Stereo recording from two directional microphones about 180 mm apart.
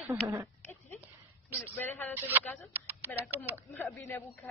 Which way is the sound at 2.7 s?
10° right (ahead or behind).